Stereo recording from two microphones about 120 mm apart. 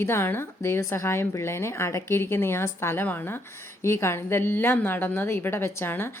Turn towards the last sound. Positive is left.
turn(degrees=20)  # may be behind; listen again after turning